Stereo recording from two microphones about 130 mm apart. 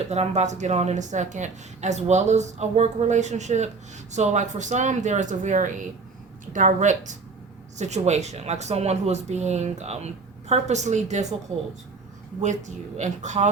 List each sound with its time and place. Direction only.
0.1 s a woman's voice: 60° right (ahead or behind)
12.4 s a woman's voice: 65° right (ahead or behind)